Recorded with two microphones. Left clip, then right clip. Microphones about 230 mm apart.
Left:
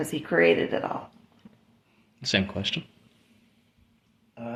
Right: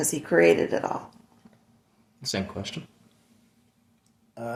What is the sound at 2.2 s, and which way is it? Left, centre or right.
Speech, left.